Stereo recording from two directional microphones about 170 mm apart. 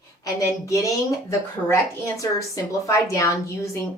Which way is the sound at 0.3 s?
20° left (ahead or behind).